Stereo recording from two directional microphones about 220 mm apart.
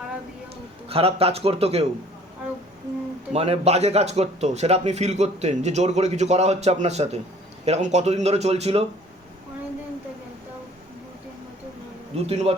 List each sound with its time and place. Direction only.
0.9 s a man's voice: 25° right (ahead or behind)
3.3 s a man's voice: 30° right (ahead or behind)
12.1 s a man's voice: 30° right (ahead or behind)